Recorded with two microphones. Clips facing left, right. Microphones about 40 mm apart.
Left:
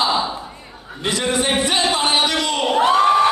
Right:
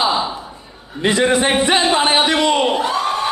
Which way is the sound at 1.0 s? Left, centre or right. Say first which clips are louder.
Right 5 dB; right.